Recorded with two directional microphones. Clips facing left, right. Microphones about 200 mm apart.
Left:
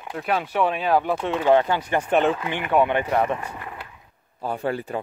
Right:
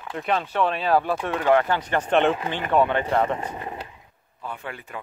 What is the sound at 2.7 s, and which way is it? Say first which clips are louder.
Speech: left 1 dB; 15° left (ahead or behind).